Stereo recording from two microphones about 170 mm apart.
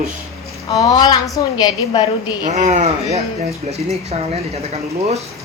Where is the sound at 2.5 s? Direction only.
45° right (ahead or behind).